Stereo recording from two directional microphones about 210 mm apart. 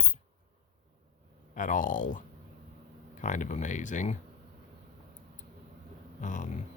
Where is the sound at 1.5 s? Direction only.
40° left (ahead or behind).